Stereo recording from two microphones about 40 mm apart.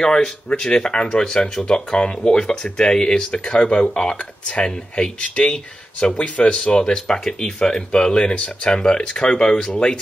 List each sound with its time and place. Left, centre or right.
0.0 s speech: centre
3.9 s speech: centre